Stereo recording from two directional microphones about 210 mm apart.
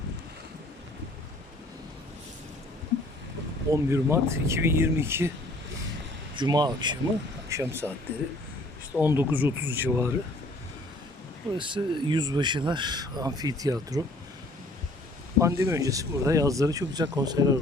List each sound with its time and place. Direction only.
3.7 s speech: 15° right (ahead or behind)
6.3 s speech: 20° right (ahead or behind)
9.0 s speech: 10° right (ahead or behind)
11.5 s speech: 25° right (ahead or behind)
15.4 s speech: 15° right (ahead or behind)